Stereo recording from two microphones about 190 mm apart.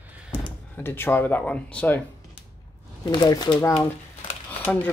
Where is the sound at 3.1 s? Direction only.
20° left (ahead or behind).